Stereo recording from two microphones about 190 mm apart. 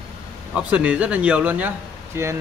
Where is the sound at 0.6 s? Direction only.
5° right (ahead or behind).